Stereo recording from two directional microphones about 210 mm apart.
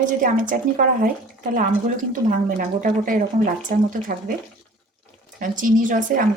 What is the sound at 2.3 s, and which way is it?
A woman's voice, 40° right (ahead or behind).